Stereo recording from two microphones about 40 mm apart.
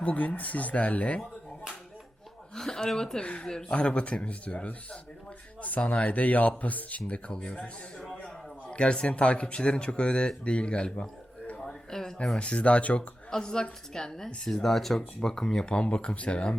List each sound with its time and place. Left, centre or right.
0.0 s speech: left
2.6 s speech: centre
3.2 s speech: left
7.3 s speech: left
8.7 s speech: left
11.5 s a sound: centre
12.4 s speech: left
13.0 s speech: centre
15.7 s speech: left